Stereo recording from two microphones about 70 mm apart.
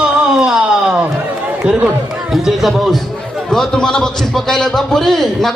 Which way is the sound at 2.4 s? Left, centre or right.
Centre.